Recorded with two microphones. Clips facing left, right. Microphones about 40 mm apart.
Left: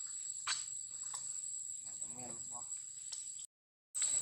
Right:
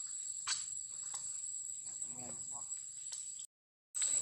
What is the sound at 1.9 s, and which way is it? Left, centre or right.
Insect, centre.